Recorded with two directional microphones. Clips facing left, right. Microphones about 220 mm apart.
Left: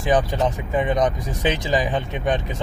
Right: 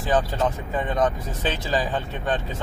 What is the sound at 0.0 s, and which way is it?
Speech, 15° left (ahead or behind).